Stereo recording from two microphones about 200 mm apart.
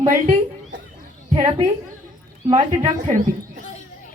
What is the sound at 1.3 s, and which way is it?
Speech, 25° right (ahead or behind).